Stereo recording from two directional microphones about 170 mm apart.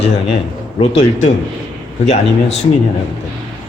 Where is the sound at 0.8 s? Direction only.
40° left (ahead or behind).